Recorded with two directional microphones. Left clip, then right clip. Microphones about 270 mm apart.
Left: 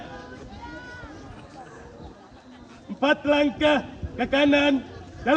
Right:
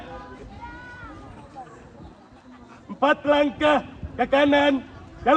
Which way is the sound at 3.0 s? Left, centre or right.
Right.